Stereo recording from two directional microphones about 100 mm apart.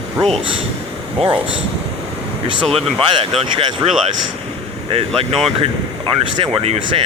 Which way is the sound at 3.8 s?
50° right (ahead or behind).